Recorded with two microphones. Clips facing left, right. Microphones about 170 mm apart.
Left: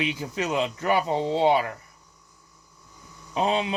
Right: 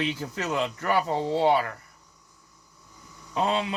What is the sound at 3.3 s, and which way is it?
Speech, 20° left (ahead or behind).